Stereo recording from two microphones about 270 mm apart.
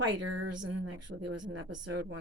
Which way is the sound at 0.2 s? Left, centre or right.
Right.